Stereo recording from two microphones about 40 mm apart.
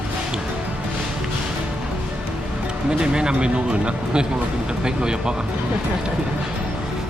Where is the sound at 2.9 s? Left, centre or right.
Right.